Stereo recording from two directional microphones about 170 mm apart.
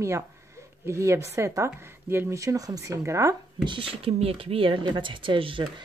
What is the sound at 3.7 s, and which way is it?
Speech, 35° right (ahead or behind).